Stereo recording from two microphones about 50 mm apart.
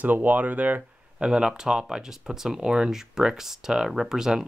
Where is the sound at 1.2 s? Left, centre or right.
Centre.